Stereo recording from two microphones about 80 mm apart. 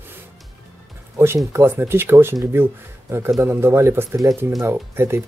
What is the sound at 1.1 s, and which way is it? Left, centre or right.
Speech, right.